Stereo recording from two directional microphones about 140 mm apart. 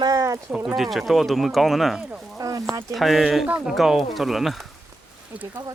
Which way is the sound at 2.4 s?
25° right (ahead or behind).